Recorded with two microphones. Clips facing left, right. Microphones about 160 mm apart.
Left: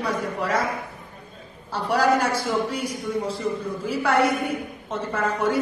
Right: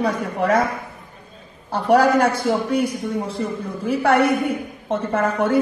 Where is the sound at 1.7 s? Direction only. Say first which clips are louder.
Right 5 dB; 55° right (ahead or behind).